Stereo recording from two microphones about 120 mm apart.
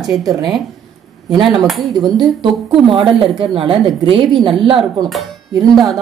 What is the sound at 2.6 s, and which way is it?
Speech, 45° right (ahead or behind).